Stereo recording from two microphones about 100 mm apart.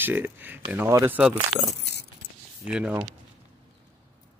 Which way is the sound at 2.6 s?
10° right (ahead or behind).